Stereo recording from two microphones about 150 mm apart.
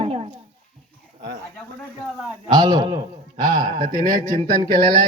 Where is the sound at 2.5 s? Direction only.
30° right (ahead or behind).